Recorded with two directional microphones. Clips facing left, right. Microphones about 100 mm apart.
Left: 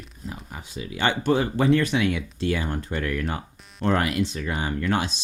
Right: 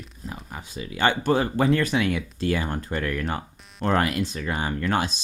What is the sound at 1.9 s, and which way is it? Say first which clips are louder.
Speech: even; 40° right (ahead or behind).